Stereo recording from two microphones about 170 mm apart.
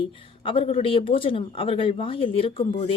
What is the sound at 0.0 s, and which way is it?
A woman's voice, 30° left (ahead or behind).